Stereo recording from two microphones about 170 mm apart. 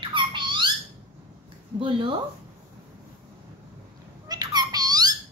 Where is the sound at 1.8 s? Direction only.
30° right (ahead or behind).